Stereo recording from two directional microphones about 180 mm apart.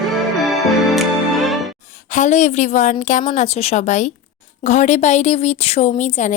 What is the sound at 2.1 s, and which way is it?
A woman's voice, 45° left (ahead or behind).